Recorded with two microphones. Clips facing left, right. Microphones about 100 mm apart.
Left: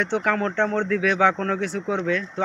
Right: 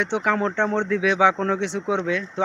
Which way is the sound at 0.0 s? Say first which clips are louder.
Right 1 dB; 15° right (ahead or behind).